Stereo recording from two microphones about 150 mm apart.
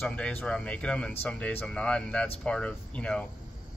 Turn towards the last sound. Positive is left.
turn(degrees=5)  # may be behind; listen again after turning